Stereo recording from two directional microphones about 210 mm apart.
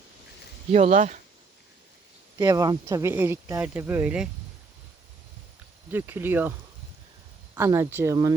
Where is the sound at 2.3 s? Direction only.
15° right (ahead or behind).